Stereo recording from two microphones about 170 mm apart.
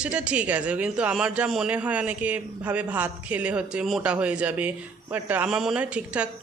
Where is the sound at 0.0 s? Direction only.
5° right (ahead or behind).